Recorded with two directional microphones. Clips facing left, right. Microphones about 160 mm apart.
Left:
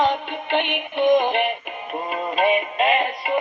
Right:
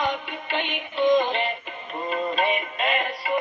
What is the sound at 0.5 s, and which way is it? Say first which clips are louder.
Synthetic singing: left 6 dB; 20° left (ahead or behind).